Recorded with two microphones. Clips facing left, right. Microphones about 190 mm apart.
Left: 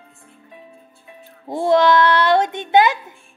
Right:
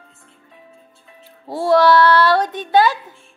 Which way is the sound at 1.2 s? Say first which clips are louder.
Left 1 dB; 20° left (ahead or behind).